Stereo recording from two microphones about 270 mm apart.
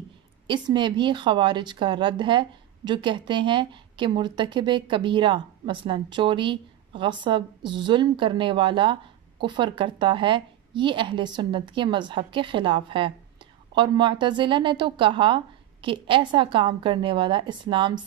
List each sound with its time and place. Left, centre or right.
0.5 s speech: centre